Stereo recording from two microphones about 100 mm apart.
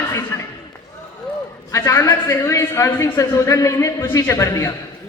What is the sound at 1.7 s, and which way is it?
A man's voice, 30° left (ahead or behind).